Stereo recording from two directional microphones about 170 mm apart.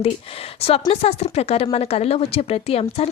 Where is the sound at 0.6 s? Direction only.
35° left (ahead or behind).